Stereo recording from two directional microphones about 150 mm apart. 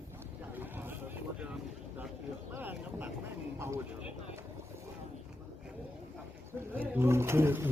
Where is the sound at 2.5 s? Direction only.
15° right (ahead or behind).